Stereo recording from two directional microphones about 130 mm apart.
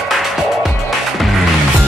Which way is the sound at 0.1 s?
Centre (ahead or behind).